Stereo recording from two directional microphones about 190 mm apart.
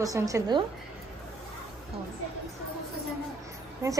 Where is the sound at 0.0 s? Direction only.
20° right (ahead or behind).